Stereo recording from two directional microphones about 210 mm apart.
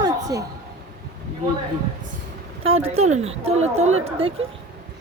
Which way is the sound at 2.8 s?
90° right.